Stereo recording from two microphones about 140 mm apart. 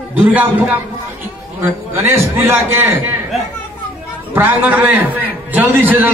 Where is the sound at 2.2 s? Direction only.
20° right (ahead or behind).